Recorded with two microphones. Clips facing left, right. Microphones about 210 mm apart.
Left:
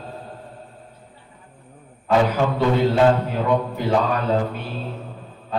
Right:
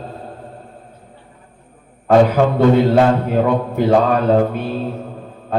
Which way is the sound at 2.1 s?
50° right (ahead or behind).